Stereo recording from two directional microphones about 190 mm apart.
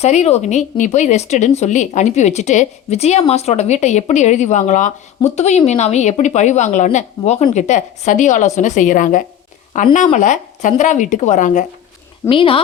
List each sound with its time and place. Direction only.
0.0 s a woman's voice: 35° left (ahead or behind)
12.3 s speech: 30° left (ahead or behind)